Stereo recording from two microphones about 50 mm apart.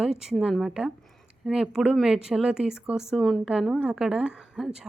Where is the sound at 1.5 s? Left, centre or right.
Centre.